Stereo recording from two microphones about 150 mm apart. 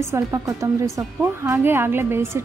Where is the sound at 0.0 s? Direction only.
20° right (ahead or behind).